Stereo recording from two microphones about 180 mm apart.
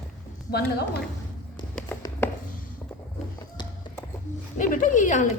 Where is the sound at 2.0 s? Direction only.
15° left (ahead or behind).